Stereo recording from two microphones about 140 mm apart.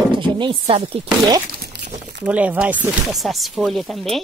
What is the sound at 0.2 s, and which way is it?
Speech, 35° right (ahead or behind).